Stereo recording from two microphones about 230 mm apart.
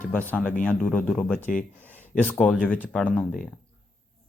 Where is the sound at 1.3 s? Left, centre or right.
Left.